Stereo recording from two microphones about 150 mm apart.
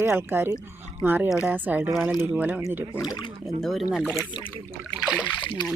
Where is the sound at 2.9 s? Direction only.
25° left (ahead or behind).